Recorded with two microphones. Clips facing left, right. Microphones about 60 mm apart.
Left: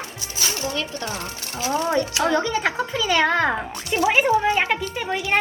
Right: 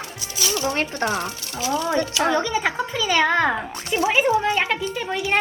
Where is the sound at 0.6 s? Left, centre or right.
Right.